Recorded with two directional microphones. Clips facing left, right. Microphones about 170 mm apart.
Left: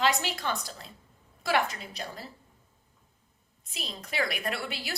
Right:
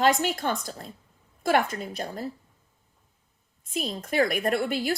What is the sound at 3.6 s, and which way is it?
A woman's voice, 50° right (ahead or behind).